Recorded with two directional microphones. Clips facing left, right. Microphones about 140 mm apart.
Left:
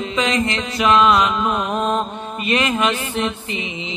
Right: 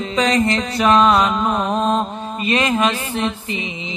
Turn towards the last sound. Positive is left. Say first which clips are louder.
# right 1 dB
turn(degrees=-35)  # may be behind; listen again after turning